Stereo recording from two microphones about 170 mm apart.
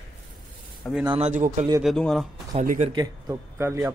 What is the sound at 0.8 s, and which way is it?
Speech, 5° left (ahead or behind).